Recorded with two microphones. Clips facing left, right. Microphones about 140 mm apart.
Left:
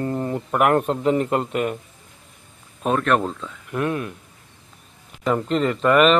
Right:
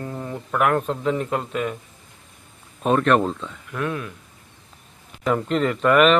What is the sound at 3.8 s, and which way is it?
Speech, 25° left (ahead or behind).